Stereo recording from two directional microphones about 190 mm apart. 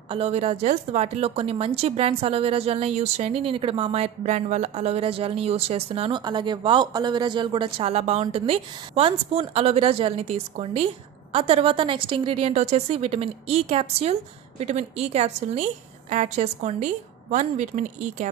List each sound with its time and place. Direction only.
0.1 s a woman's voice: 30° right (ahead or behind)